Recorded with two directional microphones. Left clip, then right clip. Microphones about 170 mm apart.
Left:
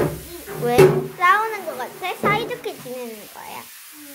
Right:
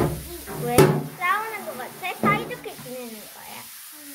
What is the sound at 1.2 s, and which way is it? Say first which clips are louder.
Children playing: left 8 dB; 25° left (ahead or behind).